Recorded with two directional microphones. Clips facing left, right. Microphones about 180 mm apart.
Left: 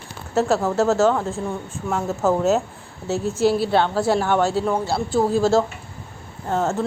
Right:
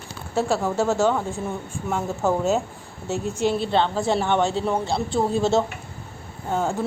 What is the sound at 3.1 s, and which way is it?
Speech, 40° left (ahead or behind).